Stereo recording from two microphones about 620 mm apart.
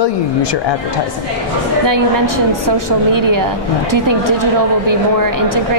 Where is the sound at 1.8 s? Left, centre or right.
Right.